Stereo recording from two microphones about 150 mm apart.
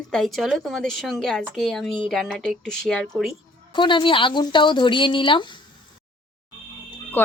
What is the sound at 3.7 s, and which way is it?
A woman's voice, 35° left (ahead or behind).